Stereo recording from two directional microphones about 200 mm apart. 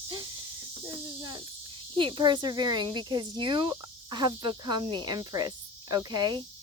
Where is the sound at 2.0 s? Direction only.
25° right (ahead or behind).